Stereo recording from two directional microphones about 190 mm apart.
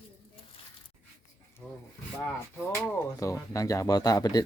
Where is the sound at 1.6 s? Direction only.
5° left (ahead or behind).